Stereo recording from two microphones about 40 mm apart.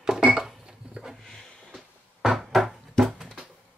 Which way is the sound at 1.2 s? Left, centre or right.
Centre.